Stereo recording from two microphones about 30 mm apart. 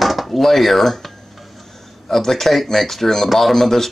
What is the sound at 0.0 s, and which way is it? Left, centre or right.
A man's voice, centre.